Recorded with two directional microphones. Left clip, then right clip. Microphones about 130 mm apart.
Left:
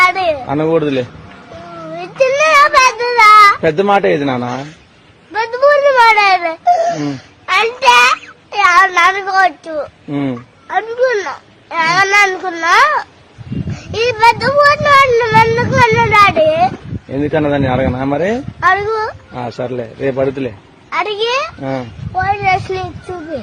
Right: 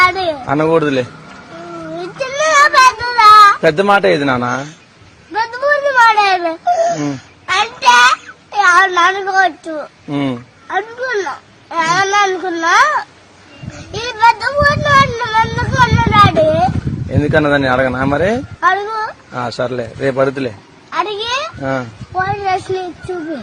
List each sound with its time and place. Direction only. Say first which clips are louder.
0.0 s a sound: left 1 dB; 30° left (ahead or behind)
0.4 s a man's voice: right 1 dB; centre (ahead or behind)
2.0 s child singing: left 6 dB; 30° left (ahead or behind)
3.6 s speech: right 1 dB; 10° left (ahead or behind)
5.5 s a sound: left 3 dB; 25° left (ahead or behind)
9.2 s speech: left 1 dB; 30° left (ahead or behind)
10.1 s speech: right 3 dB; 15° left (ahead or behind)
10.7 s speech: left 5 dB; 25° left (ahead or behind)
17.1 s speech: right 2 dB; 10° left (ahead or behind)
18.7 s speech: left 7 dB; 30° left (ahead or behind)
19.5 s a man's voice: right 1 dB; 5° left (ahead or behind)
20.9 s speech: left 2 dB; 30° left (ahead or behind)
21.6 s a man's voice: right 2 dB; centre (ahead or behind)
22.2 s speech: left 3 dB; 35° left (ahead or behind)